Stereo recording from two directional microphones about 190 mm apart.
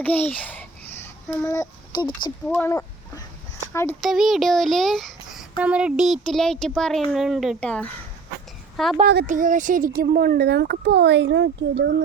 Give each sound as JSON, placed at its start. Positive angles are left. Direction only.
{"t": 0.0, "sound": "a child's voice", "side_deg": 10}
{"t": 4.0, "sound": "a child's voice", "side_deg": 0}
{"t": 9.2, "sound": "a child's voice", "side_deg": -40}